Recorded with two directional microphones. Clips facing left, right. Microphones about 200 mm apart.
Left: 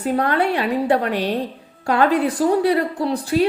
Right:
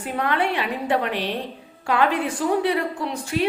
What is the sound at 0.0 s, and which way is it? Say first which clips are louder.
A woman's voice: left 5 dB; 40° left (ahead or behind).